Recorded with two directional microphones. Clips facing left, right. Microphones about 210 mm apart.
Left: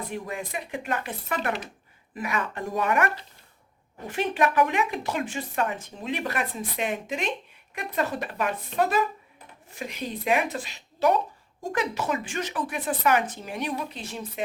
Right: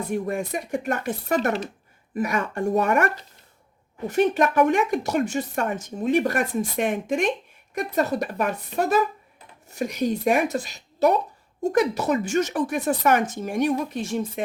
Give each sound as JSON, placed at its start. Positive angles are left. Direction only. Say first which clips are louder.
{"t": 0.1, "sound": "speech", "louder": "right 7 dB", "side_deg": -45}